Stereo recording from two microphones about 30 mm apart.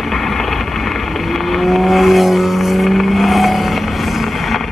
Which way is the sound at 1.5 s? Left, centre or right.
Centre.